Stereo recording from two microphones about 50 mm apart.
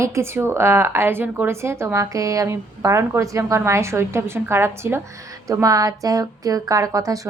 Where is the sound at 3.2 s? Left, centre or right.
Right.